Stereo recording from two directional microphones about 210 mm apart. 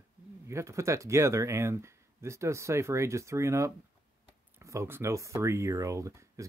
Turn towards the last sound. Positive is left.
turn(degrees=-15)  # may be behind; listen again after turning